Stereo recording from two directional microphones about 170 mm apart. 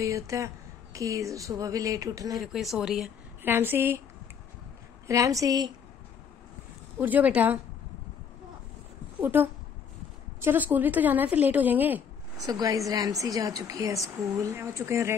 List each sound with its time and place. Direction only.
0.0 s a woman's voice: 20° right (ahead or behind)
2.3 s a woman's voice: centre (ahead or behind)
5.0 s a woman's voice: 20° right (ahead or behind)
7.0 s speech: 10° right (ahead or behind)
9.2 s speech: 10° right (ahead or behind)
12.4 s a woman's voice: 20° right (ahead or behind)